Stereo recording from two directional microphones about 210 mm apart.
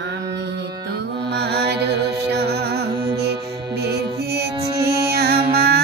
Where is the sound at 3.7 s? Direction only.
50° right (ahead or behind).